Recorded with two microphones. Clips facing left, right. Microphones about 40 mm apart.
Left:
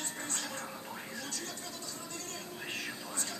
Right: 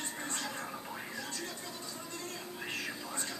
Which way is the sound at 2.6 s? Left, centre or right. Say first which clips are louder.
Right 1 dB; centre.